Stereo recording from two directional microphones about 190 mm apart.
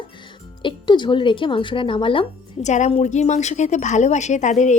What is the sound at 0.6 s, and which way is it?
Speech, 25° left (ahead or behind).